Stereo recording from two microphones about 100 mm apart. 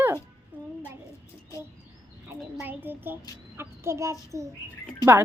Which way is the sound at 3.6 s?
25° right (ahead or behind).